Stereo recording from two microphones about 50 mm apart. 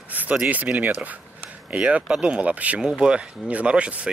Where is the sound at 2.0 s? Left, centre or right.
Centre.